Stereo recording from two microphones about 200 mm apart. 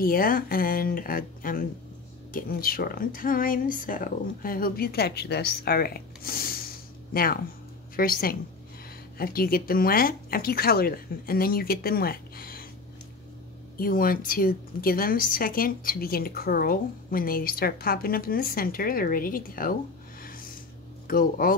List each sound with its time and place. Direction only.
0.0 s a woman's voice: 45° left (ahead or behind)
13.7 s a woman's voice: 45° left (ahead or behind)